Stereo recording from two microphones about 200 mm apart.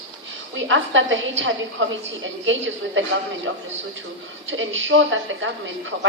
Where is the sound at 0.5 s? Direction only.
70° right (ahead or behind).